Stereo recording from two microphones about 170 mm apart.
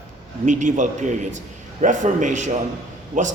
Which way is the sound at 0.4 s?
45° right (ahead or behind).